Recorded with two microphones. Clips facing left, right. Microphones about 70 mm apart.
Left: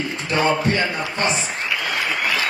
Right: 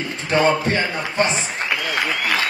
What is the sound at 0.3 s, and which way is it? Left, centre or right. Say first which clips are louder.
A man's voice: right 2 dB; right.